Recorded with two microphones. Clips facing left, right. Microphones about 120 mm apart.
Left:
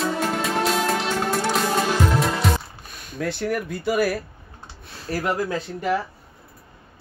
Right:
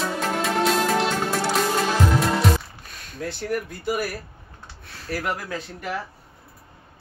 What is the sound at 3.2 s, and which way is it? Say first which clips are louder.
Speech: left 3 dB; 70° left (ahead or behind).